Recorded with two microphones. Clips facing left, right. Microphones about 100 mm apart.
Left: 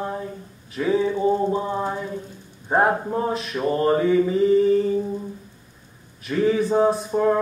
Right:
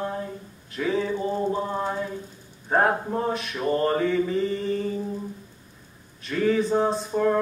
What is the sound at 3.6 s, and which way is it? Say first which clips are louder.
A man's voice: left 3 dB; 15° left (ahead or behind).